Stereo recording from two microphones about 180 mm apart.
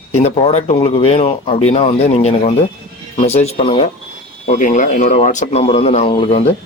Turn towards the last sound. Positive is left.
turn(degrees=30)  # may be behind; listen again after turning